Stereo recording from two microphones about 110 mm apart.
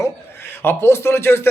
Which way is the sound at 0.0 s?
20° left (ahead or behind).